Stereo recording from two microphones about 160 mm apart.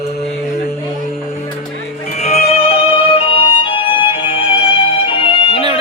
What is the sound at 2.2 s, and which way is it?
Music, 35° left (ahead or behind).